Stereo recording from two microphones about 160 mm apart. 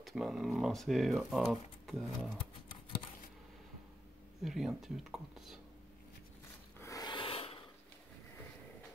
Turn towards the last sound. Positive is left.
turn(degrees=35)  # may be behind; listen again after turning